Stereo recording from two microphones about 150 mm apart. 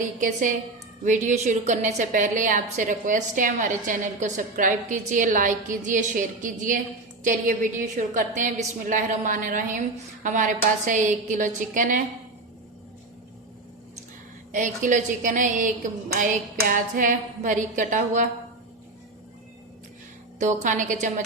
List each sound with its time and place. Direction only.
0.2 s a woman's voice: 55° right (ahead or behind)
14.5 s a woman's voice: 60° right (ahead or behind)
20.4 s a woman's voice: 55° right (ahead or behind)